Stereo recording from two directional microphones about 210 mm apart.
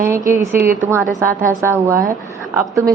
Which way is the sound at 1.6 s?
10° right (ahead or behind).